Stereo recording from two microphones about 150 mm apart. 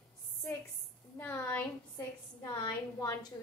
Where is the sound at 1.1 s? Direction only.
15° left (ahead or behind).